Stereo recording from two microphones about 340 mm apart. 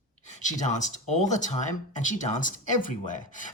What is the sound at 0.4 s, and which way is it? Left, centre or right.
Speech, left.